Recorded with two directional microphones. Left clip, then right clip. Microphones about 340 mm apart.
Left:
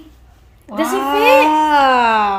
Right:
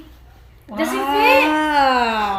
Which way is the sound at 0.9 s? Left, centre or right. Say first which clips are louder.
Left 3 dB; centre.